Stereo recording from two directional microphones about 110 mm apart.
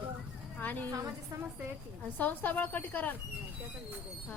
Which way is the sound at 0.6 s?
15° left (ahead or behind).